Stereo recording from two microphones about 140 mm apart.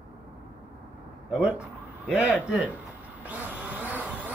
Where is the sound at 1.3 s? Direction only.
5° right (ahead or behind).